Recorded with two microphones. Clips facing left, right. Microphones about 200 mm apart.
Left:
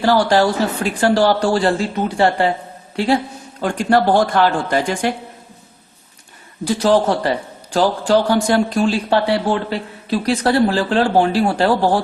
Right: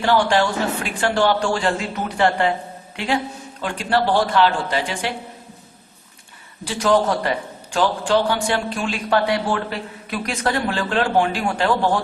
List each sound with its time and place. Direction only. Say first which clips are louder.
0.0 s a man's voice: left 4 dB; 35° left (ahead or behind)
6.7 s a man's voice: left 3 dB; 30° left (ahead or behind)